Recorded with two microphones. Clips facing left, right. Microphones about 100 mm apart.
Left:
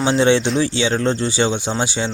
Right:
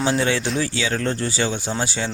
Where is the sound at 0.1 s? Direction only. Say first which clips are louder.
Left 6 dB; 25° left (ahead or behind).